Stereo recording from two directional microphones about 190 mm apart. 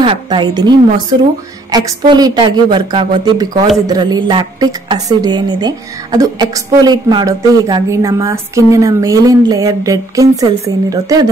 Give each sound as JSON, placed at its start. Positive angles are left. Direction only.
{"t": 0.0, "sound": "speech", "side_deg": -25}